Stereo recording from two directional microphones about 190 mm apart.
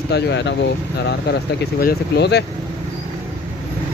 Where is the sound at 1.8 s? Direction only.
60° left (ahead or behind).